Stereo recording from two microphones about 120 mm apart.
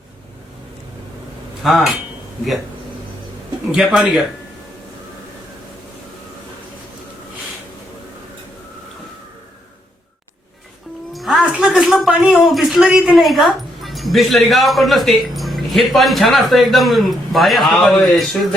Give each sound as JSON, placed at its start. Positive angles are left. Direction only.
{"t": 1.6, "sound": "a man's voice", "side_deg": 0}
{"t": 3.7, "sound": "a man's voice", "side_deg": -5}
{"t": 11.1, "sound": "speech", "side_deg": 0}